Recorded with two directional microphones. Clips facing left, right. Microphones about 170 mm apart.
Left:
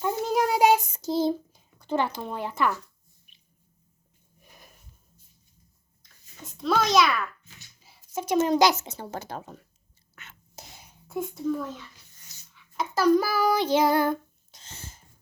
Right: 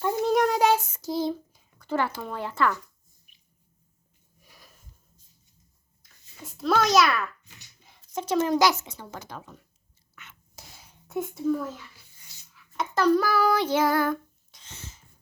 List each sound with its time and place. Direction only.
0.0 s child singing: 5° left (ahead or behind); by 1.3 s 25° left (ahead or behind)
1.3 s a sound: 30° left (ahead or behind)
1.9 s speech: 15° left (ahead or behind)
4.4 s sniff: 20° left (ahead or behind)
6.5 s a child's voice: centre (ahead or behind)
7.8 s a sound: 5° left (ahead or behind)
8.4 s speech: 20° left (ahead or behind)
10.5 s whispering: 20° left (ahead or behind)
11.1 s speech: centre (ahead or behind)
12.2 s a sound: centre (ahead or behind)
13.7 s speech: 20° left (ahead or behind)